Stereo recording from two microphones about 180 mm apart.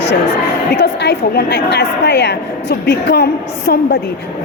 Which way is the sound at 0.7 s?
65° left (ahead or behind).